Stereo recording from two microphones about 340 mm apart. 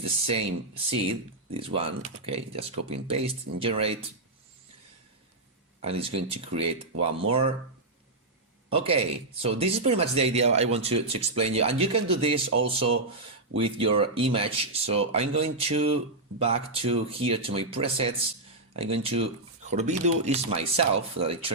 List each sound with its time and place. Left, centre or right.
0.0 s speech: centre
5.8 s speech: centre
8.7 s speech: centre